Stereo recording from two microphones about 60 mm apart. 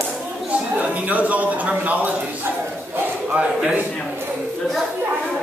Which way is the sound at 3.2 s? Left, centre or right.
Right.